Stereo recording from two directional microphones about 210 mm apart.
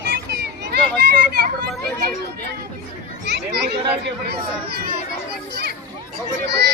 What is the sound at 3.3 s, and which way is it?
A child's voice, 55° right (ahead or behind).